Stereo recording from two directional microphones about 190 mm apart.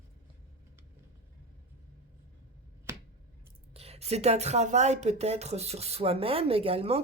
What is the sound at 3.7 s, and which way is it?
Speech, 30° right (ahead or behind).